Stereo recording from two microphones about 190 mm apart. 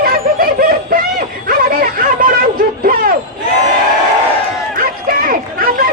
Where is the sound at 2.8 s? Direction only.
50° right (ahead or behind).